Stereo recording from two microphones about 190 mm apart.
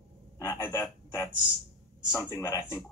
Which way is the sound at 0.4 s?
15° left (ahead or behind).